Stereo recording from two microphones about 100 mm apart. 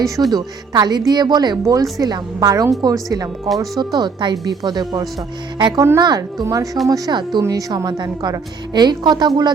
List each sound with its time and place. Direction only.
0.0 s speech: centre (ahead or behind)
0.3 s a woman's voice: 40° right (ahead or behind)
3.8 s a woman's voice: 45° right (ahead or behind)